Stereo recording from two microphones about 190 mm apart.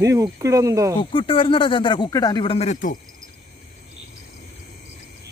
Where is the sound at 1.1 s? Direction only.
30° left (ahead or behind).